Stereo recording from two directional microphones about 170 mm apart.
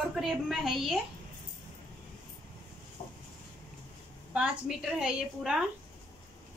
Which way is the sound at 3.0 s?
30° left (ahead or behind).